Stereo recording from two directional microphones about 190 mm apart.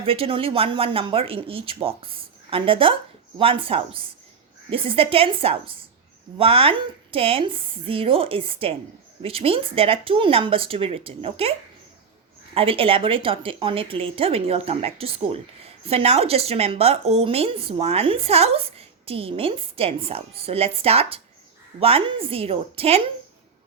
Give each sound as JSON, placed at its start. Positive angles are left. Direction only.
{"t": 0.0, "sound": "speech", "side_deg": -30}
{"t": 12.5, "sound": "a woman's voice", "side_deg": -30}